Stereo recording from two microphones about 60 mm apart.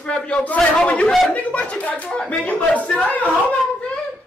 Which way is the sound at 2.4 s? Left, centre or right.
Left.